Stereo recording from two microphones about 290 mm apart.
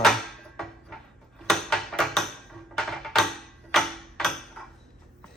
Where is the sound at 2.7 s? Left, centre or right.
Centre.